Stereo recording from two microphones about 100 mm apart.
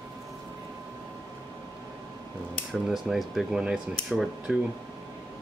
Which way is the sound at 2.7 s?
5° right (ahead or behind).